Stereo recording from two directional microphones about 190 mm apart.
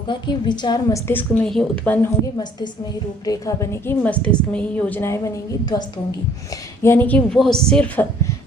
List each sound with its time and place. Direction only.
0.1 s a woman's voice: 25° left (ahead or behind)
6.8 s a woman's voice: 10° left (ahead or behind)